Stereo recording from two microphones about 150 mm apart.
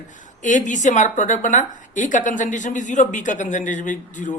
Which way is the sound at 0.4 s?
55° left (ahead or behind).